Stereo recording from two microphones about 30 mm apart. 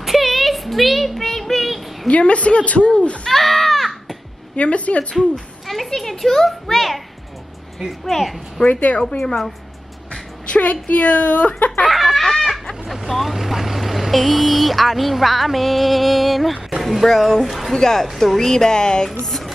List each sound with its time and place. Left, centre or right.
0.0 s a sound: centre
2.0 s a woman's voice: left
3.3 s a sound: centre
4.6 s a woman's voice: left
5.1 s a child's voice: centre
8.0 s a child's voice: centre
8.6 s speech: right
10.5 s a woman's voice: left
11.9 s speech: centre
17.1 s a child's voice: centre
17.5 s speech: centre
17.7 s a child's voice: centre
18.0 s a child's voice: centre; by 19.0 s left
19.0 s music: centre